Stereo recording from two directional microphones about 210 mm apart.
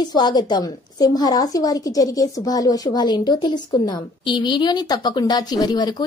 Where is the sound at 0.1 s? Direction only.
20° left (ahead or behind).